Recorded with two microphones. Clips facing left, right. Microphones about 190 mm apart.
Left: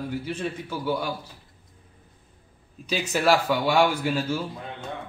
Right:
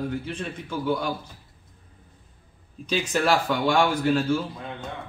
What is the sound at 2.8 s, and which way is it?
A man's voice, 10° left (ahead or behind).